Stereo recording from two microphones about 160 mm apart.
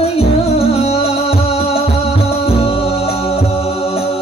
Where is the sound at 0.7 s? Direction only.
40° left (ahead or behind).